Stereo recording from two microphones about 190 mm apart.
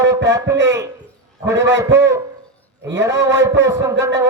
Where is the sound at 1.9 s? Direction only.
15° right (ahead or behind).